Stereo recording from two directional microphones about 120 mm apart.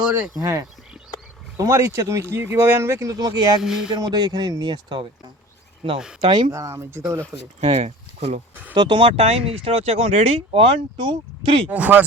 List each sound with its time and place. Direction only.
0.0 s speech: 10° right (ahead or behind)
0.3 s speech: 30° right (ahead or behind)
3.6 s speech: 5° right (ahead or behind)
4.0 s speech: 35° right (ahead or behind)
6.2 s speech: 40° right (ahead or behind)
6.5 s speech: 25° right (ahead or behind)
7.6 s speech: 55° right (ahead or behind)
8.7 s speech: 40° right (ahead or behind)
11.7 s speech: 15° right (ahead or behind)